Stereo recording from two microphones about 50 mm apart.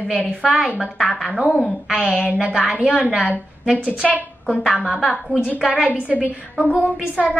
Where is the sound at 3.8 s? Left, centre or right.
Centre.